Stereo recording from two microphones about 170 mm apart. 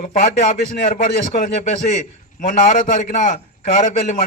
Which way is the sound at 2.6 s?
45° left (ahead or behind).